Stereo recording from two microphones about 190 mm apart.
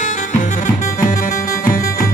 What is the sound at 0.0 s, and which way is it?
Music, 40° left (ahead or behind).